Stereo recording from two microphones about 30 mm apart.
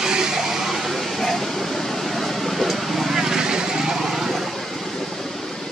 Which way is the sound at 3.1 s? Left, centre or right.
Centre.